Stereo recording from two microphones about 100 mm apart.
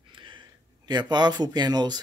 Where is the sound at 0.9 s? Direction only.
45° right (ahead or behind).